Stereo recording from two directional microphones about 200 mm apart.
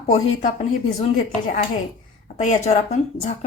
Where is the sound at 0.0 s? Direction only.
35° left (ahead or behind).